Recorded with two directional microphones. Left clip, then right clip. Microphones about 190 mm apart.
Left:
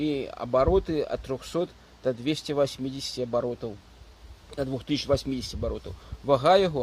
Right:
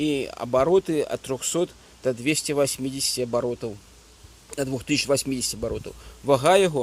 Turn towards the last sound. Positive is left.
turn(degrees=-25)  # may be behind; listen again after turning